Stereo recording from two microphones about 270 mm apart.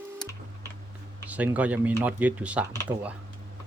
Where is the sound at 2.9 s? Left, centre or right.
Right.